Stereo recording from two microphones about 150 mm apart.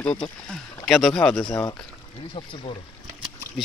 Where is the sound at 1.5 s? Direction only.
20° left (ahead or behind).